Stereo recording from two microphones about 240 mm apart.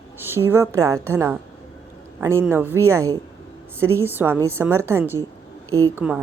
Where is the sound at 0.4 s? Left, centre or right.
Centre.